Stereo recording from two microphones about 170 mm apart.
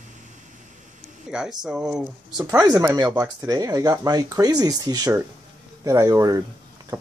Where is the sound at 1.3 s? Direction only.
5° right (ahead or behind).